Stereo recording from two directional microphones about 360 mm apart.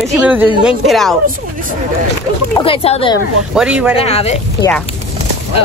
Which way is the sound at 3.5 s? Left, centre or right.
Centre.